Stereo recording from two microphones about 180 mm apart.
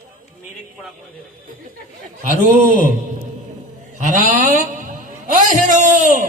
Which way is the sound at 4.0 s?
45° right (ahead or behind).